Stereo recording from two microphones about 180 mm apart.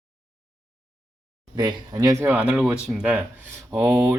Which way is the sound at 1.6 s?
20° right (ahead or behind).